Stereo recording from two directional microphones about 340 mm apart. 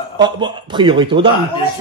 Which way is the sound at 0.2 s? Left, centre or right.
Centre.